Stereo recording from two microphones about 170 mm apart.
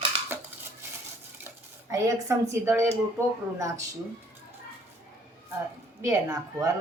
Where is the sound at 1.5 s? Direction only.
20° right (ahead or behind).